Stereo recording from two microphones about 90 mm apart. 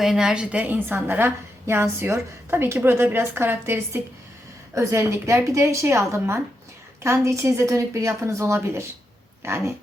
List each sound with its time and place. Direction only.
0.0 s a woman's voice: 5° right (ahead or behind); by 9.7 s 30° right (ahead or behind)